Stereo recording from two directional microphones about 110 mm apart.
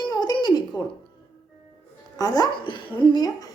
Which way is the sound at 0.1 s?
40° left (ahead or behind).